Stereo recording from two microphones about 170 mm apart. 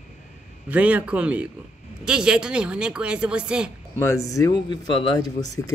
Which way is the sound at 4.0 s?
15° left (ahead or behind).